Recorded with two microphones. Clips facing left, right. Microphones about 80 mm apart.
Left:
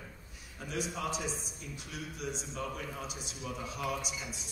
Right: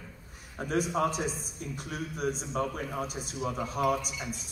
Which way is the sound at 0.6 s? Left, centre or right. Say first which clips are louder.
Right 9 dB; right.